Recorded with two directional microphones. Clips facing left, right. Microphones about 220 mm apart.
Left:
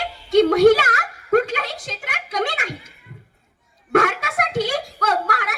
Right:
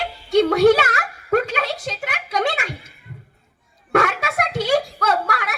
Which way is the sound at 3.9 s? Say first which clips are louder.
Left 1 dB; 45° left (ahead or behind).